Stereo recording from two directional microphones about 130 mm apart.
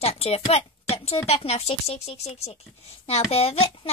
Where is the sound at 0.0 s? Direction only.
50° left (ahead or behind).